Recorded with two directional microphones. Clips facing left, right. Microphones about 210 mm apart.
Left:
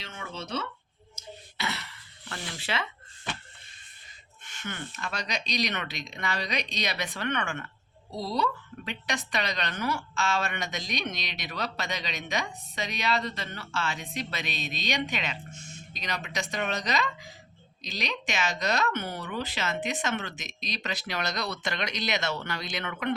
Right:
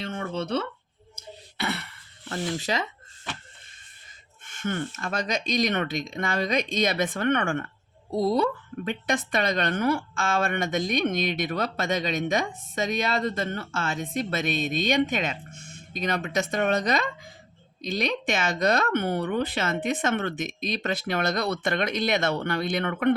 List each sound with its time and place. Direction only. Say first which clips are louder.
0.0 s speech: right 9 dB; 55° right (ahead or behind)
1.1 s throat clearing: right 1 dB; 55° right (ahead or behind)
2.3 s speech: right 7 dB; 40° right (ahead or behind)
4.4 s a woman's voice: right 9 dB; 50° right (ahead or behind)